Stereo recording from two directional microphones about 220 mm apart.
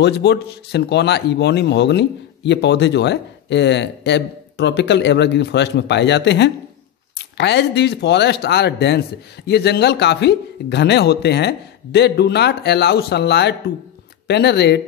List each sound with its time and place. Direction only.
0.0 s speech: 50° left (ahead or behind)